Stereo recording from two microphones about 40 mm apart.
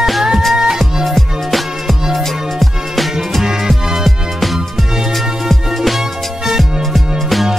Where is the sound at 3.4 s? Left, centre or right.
Centre.